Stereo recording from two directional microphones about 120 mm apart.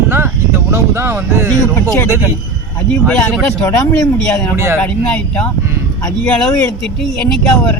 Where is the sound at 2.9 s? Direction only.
10° left (ahead or behind).